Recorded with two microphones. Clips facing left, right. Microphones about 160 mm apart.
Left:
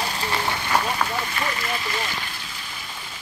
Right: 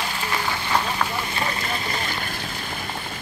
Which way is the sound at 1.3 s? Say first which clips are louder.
Even; 30° right (ahead or behind).